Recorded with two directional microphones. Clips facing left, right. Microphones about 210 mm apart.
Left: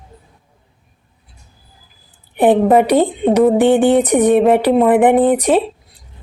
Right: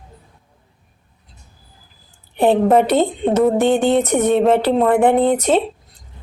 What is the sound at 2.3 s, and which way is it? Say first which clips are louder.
Speech: left 3 dB; 15° left (ahead or behind).